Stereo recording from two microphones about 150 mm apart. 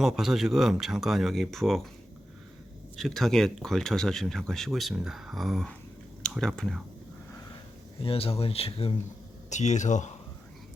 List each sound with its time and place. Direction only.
0.0 s speech: centre (ahead or behind)
2.9 s speech: centre (ahead or behind)
8.0 s speech: 40° left (ahead or behind)
9.5 s speech: 50° left (ahead or behind)